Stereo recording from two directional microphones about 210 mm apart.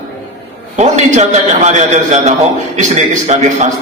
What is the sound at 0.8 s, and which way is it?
A man's voice, 35° right (ahead or behind).